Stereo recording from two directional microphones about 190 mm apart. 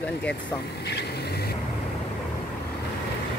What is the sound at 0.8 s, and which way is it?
Vehicle, 60° left (ahead or behind).